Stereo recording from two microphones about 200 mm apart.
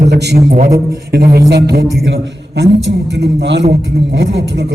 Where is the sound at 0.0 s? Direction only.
55° right (ahead or behind).